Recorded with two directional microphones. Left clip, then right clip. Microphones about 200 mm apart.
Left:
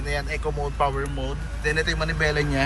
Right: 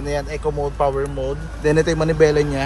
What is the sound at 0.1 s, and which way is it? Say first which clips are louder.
Speech: right 5 dB; 30° right (ahead or behind).